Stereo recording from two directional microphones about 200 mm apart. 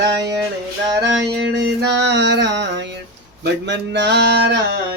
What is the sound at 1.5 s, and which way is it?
Music, 60° right (ahead or behind).